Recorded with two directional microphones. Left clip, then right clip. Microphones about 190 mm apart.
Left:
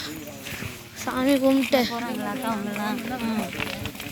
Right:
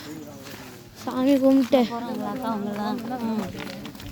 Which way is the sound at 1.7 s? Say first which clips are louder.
Right 1 dB; 45° right (ahead or behind).